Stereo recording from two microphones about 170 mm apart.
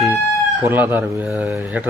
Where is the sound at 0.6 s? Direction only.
10° right (ahead or behind).